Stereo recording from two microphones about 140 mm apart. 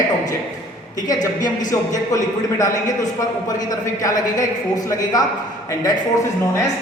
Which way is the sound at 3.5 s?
25° left (ahead or behind).